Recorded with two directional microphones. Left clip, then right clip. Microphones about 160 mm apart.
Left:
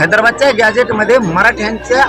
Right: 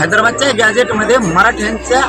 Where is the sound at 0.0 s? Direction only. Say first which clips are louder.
Left 2 dB; 20° left (ahead or behind).